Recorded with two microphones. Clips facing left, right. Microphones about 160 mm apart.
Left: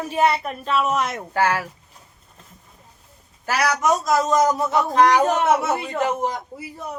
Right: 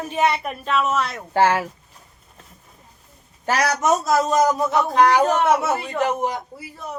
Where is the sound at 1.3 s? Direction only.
25° right (ahead or behind).